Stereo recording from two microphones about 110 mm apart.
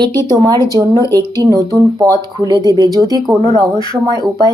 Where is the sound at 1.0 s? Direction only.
25° left (ahead or behind).